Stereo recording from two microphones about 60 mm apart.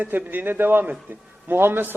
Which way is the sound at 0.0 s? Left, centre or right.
Right.